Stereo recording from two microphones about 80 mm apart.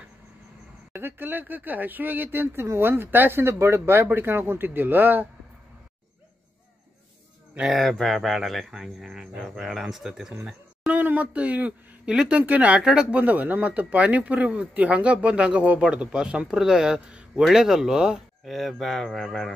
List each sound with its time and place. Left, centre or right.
0.9 s speech: right
7.6 s speech: centre
10.9 s speech: right; by 19.5 s centre